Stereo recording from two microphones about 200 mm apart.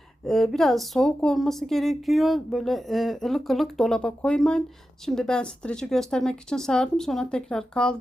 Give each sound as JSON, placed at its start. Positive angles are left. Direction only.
{"t": 0.3, "sound": "speech", "side_deg": 0}